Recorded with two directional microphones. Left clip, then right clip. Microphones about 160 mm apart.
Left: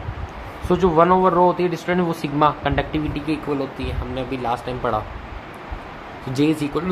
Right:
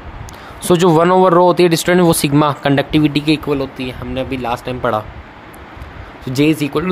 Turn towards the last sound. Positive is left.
turn(degrees=-55)  # may be behind; listen again after turning